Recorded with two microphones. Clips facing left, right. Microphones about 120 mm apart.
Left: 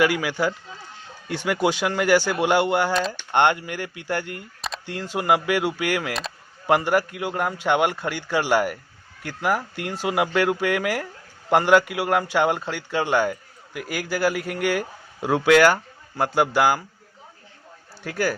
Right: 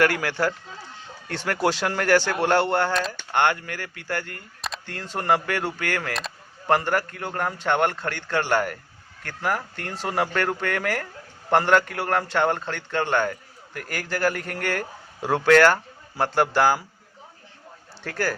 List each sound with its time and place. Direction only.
0.0 s a man's voice: 5° left (ahead or behind)
3.1 s a man's voice: 20° left (ahead or behind)
18.0 s speech: 5° left (ahead or behind)